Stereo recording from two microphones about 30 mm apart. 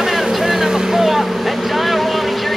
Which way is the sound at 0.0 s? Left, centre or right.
Centre.